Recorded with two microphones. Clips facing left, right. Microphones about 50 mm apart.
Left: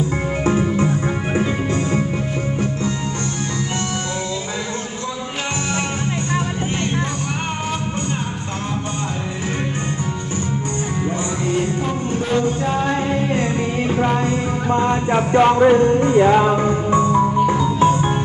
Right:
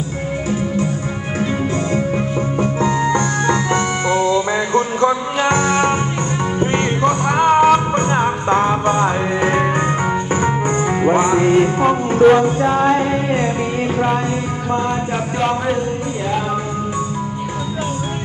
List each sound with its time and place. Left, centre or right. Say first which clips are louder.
7.4 s music: right 13 dB; right
11.1 s music: right 11 dB; right
11.8 s music: right 10 dB; right
12.4 s music: right 4 dB; right
14.7 s a sound: left 2 dB; centre
16.2 s music: left 9 dB; left